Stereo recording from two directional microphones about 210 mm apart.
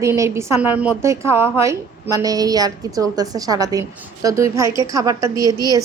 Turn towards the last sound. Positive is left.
turn(degrees=-15)  # may be behind; listen again after turning